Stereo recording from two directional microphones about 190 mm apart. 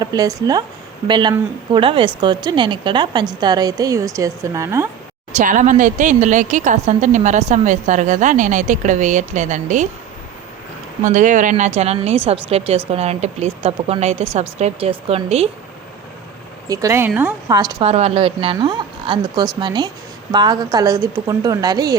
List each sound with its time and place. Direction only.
0.0 s speech: 20° right (ahead or behind)
5.4 s a woman's voice: 40° right (ahead or behind)
11.0 s a woman's voice: 40° right (ahead or behind)
16.6 s speech: 15° right (ahead or behind)
17.8 s speech: 35° right (ahead or behind)